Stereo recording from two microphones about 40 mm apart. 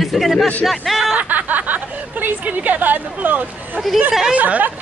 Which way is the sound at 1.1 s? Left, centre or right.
Right.